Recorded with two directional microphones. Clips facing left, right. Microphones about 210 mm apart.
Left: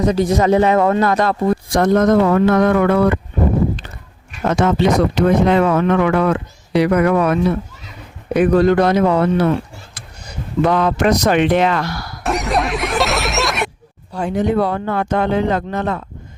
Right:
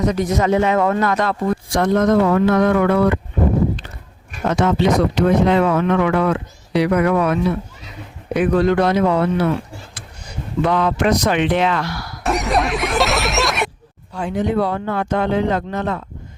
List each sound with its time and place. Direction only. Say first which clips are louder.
0.0 s speech: left 3 dB; 30° left (ahead or behind); by 3.2 s 50° left (ahead or behind)
4.4 s speech: left 1 dB; 50° left (ahead or behind)
12.2 s speech: even; centre (ahead or behind)
14.1 s speech: left 3 dB; 40° left (ahead or behind)